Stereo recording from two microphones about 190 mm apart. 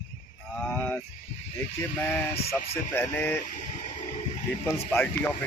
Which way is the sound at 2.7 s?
10° left (ahead or behind).